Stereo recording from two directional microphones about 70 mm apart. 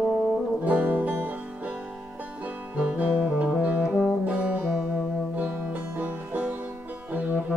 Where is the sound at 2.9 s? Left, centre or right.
Centre.